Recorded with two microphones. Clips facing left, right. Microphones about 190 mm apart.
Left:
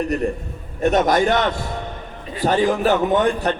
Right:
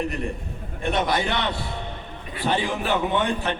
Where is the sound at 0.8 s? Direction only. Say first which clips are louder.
Left 7 dB; 45° left (ahead or behind).